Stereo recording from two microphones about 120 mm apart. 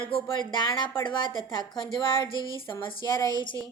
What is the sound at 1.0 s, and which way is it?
Speech, 40° left (ahead or behind).